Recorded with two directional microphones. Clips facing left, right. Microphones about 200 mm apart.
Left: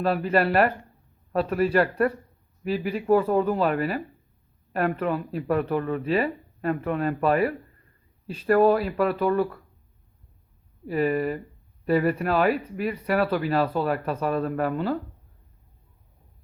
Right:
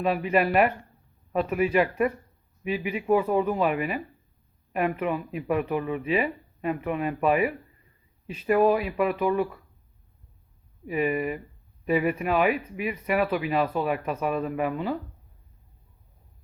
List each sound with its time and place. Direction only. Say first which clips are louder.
0.0 s speech: left 1 dB; centre (ahead or behind)
11.9 s speech: left 2 dB; 5° right (ahead or behind)